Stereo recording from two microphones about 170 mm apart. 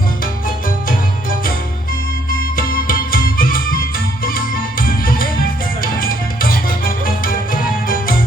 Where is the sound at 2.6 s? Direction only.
55° left (ahead or behind).